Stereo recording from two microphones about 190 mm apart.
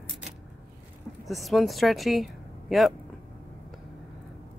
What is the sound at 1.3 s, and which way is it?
A woman's voice, centre (ahead or behind).